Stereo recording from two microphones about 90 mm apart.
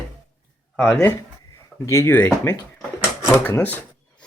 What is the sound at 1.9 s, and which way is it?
Speech, 35° left (ahead or behind).